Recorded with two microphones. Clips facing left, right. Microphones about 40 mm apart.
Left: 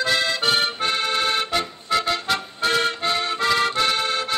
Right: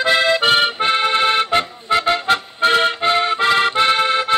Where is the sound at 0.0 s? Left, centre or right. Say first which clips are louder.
Right 6 dB; right.